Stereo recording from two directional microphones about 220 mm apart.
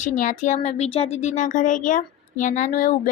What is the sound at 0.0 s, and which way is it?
Speech, 35° left (ahead or behind).